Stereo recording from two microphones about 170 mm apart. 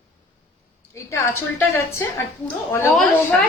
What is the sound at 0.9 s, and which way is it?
A woman's voice, 15° left (ahead or behind).